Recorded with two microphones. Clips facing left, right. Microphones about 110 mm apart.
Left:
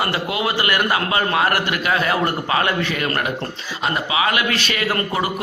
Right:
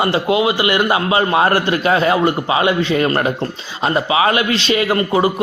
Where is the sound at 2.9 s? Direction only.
30° right (ahead or behind).